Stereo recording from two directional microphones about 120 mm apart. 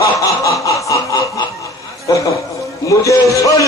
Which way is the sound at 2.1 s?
30° left (ahead or behind).